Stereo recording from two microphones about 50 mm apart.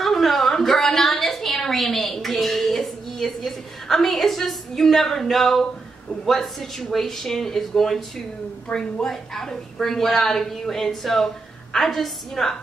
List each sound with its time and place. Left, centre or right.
0.0 s a sound: centre
6.2 s speech: centre
8.7 s a woman's voice: left
9.0 s a woman's voice: centre